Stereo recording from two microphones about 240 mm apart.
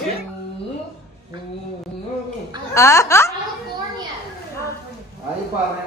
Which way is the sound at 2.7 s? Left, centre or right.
Centre.